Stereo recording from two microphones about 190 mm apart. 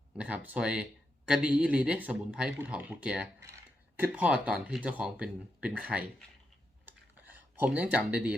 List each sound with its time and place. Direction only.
0.2 s speech: 5° right (ahead or behind)
6.8 s computer keyboard: 10° right (ahead or behind)